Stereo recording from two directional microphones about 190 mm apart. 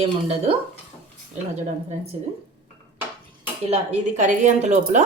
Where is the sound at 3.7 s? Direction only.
40° right (ahead or behind).